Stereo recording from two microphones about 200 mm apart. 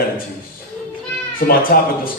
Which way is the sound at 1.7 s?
50° left (ahead or behind).